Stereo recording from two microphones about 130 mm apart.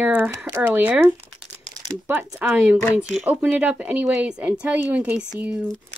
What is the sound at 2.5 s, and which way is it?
Speech, 5° right (ahead or behind).